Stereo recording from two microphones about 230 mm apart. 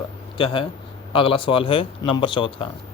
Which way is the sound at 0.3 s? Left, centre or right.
Left.